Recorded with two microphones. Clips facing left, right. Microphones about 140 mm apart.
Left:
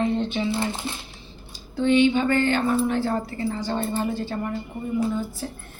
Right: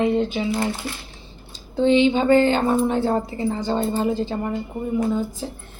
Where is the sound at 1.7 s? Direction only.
25° right (ahead or behind).